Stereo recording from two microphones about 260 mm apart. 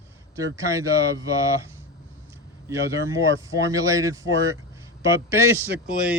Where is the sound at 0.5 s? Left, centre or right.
Centre.